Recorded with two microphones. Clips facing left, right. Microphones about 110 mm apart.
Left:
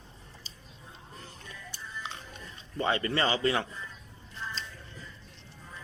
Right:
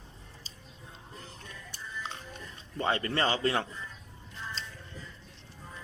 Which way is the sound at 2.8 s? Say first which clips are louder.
Left 1 dB; 40° right (ahead or behind).